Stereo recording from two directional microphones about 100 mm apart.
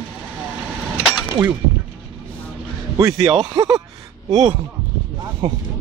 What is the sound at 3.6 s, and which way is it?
Speech, 45° right (ahead or behind).